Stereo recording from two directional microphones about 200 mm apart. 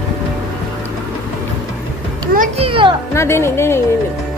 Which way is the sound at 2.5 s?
25° right (ahead or behind).